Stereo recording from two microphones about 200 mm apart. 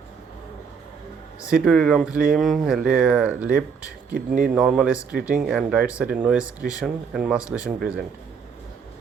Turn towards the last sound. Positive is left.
turn(degrees=-5)  # may be behind; listen again after turning